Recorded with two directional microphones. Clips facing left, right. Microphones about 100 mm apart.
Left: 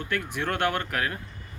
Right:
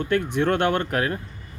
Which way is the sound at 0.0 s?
30° right (ahead or behind).